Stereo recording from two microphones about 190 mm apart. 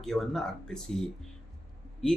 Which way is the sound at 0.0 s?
Centre (ahead or behind).